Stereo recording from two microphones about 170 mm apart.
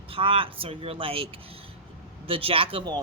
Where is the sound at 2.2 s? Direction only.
30° right (ahead or behind).